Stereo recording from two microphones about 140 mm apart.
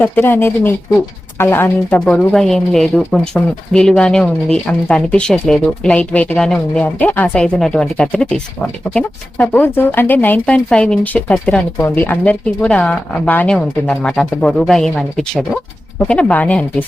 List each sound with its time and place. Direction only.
0.0 s speech: 15° left (ahead or behind)
2.0 s speech: 5° left (ahead or behind)